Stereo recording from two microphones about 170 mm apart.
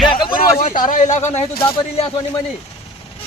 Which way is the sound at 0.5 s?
50° left (ahead or behind).